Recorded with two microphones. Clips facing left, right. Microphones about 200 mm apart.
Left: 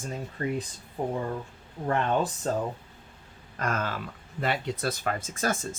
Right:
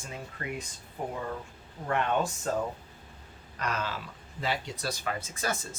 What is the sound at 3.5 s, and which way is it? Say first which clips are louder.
Speech: left 3 dB; 50° left (ahead or behind).